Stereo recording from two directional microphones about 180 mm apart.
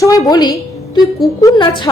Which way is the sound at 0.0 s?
20° left (ahead or behind).